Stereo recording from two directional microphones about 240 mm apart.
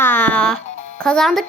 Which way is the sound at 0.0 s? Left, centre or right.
Centre.